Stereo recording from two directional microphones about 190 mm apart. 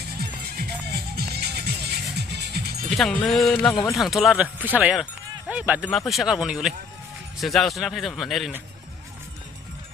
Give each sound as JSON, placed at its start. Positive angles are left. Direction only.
{"t": 0.2, "sound": "music", "side_deg": -55}
{"t": 2.9, "sound": "speech", "side_deg": 5}